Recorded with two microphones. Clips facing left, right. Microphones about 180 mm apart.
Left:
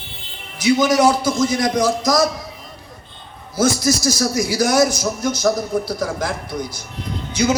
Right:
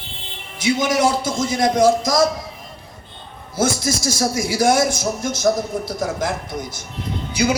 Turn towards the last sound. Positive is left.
turn(degrees=-10)  # may be behind; listen again after turning